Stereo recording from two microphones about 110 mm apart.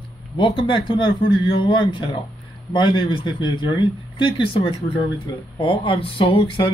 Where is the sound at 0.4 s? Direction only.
50° left (ahead or behind).